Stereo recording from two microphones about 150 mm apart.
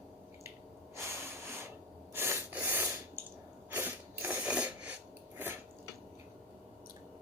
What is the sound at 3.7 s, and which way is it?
Sneeze, 15° right (ahead or behind).